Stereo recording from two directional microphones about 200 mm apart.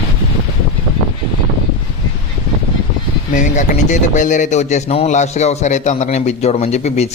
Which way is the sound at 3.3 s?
40° left (ahead or behind).